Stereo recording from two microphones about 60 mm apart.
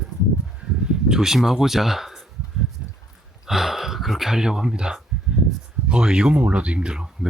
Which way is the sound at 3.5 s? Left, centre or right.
Centre.